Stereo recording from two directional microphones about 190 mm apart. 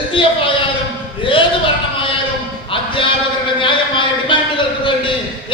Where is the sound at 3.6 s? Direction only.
25° left (ahead or behind).